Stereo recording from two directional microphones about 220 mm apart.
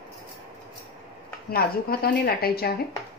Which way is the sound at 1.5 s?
45° left (ahead or behind).